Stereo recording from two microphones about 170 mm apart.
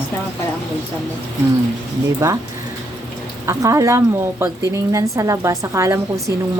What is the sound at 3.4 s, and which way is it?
A woman's voice, 15° right (ahead or behind).